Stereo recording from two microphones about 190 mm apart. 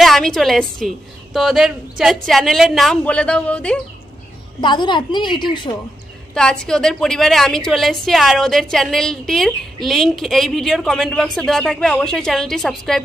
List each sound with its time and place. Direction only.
0.0 s a woman's voice: centre (ahead or behind)
4.6 s a woman's voice: 25° left (ahead or behind)
6.3 s a woman's voice: 5° left (ahead or behind)